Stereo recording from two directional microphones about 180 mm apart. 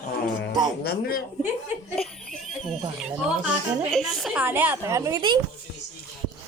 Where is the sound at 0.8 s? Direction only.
60° left (ahead or behind).